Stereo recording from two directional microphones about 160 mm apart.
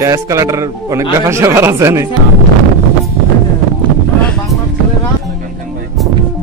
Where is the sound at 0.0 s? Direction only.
20° right (ahead or behind).